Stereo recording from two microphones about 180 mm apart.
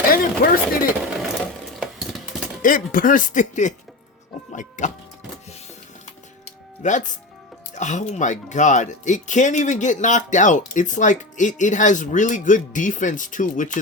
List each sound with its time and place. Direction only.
0.1 s speech: 55° left (ahead or behind)
1.8 s stir: centre (ahead or behind)
2.6 s speech: 50° left (ahead or behind)
4.8 s speech: 45° left (ahead or behind)
6.1 s music: 40° left (ahead or behind)
7.7 s speech: 40° left (ahead or behind)